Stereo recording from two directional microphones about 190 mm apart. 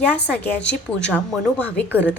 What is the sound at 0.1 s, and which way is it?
A woman's voice, 5° left (ahead or behind).